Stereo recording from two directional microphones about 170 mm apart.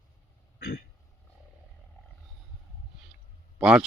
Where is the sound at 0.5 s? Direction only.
65° left (ahead or behind).